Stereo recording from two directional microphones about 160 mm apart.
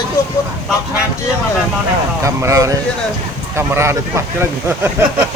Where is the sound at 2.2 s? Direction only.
20° right (ahead or behind).